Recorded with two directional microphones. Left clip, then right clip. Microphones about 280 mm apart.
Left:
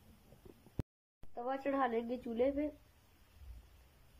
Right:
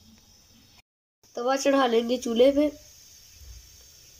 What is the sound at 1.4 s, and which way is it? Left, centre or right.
Speech, centre.